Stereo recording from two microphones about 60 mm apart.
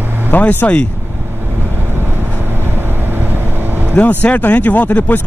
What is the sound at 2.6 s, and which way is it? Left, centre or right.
Vehicle, right.